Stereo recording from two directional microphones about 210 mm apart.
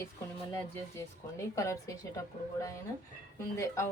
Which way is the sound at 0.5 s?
15° left (ahead or behind).